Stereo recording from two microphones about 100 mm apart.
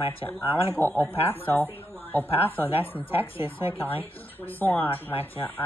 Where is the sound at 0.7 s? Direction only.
20° left (ahead or behind).